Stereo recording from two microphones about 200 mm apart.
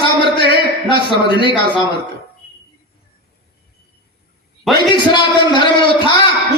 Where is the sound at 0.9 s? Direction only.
25° left (ahead or behind).